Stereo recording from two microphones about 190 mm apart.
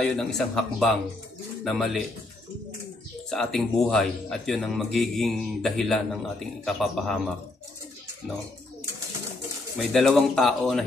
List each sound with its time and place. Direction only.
0.0 s speech: centre (ahead or behind)
3.3 s speech: centre (ahead or behind)
9.8 s speech: centre (ahead or behind)